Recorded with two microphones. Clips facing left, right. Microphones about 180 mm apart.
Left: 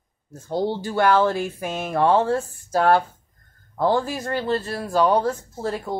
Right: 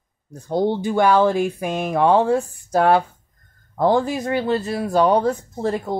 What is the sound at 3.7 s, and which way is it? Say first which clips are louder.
Speech: right 3 dB; 15° right (ahead or behind).